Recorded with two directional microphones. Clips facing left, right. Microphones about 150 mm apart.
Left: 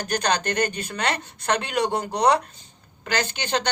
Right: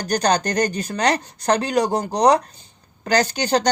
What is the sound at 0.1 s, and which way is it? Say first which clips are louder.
Speech: right 5 dB; 40° right (ahead or behind).